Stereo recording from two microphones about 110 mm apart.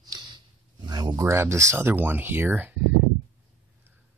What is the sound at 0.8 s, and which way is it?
Speech, 40° right (ahead or behind).